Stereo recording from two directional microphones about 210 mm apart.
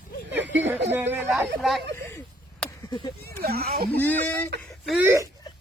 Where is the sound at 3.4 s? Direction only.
50° right (ahead or behind).